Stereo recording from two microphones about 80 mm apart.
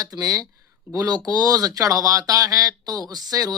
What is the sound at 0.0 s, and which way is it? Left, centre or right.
Speech, right.